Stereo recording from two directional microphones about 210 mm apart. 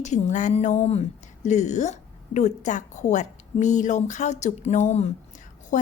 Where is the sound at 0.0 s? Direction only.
35° left (ahead or behind).